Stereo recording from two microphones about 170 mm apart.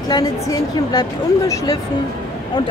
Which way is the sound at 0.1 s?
25° left (ahead or behind).